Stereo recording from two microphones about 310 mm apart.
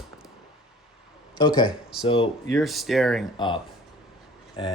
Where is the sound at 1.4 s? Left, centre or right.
Centre.